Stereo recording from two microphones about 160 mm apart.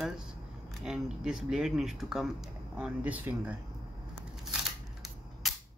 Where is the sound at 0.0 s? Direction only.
5° right (ahead or behind).